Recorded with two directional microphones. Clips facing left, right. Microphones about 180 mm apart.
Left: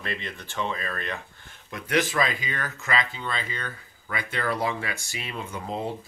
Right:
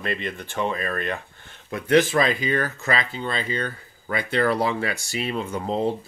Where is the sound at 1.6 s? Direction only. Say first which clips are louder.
Right 7 dB; 30° right (ahead or behind).